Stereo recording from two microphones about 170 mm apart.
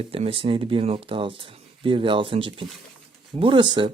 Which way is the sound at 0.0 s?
35° right (ahead or behind).